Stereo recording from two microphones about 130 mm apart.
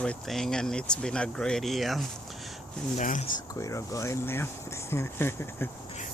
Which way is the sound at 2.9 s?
85° left.